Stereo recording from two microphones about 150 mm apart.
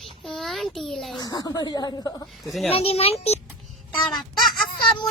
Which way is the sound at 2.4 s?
Centre (ahead or behind).